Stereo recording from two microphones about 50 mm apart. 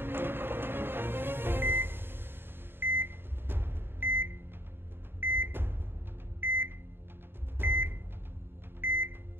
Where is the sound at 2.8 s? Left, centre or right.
Right.